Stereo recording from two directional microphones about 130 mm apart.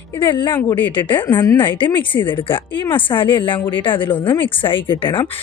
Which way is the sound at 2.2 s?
40° left (ahead or behind).